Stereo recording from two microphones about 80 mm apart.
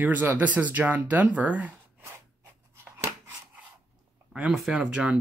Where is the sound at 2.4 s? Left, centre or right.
Right.